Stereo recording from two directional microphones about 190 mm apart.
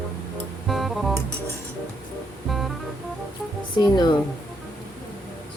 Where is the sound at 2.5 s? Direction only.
Centre (ahead or behind).